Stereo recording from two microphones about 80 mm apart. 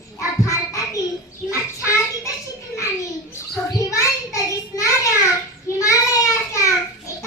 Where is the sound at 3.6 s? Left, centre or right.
Left.